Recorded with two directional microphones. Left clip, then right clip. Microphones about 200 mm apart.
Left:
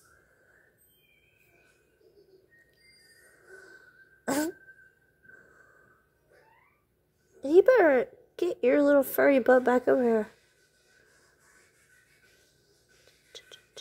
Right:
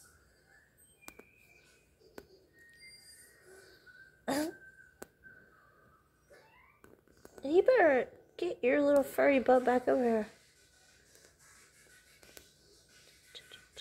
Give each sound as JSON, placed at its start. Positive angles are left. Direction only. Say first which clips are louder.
{"t": 4.2, "sound": "cough", "louder": "left 5 dB", "side_deg": 25}
{"t": 7.4, "sound": "speech", "louder": "left 6 dB", "side_deg": 30}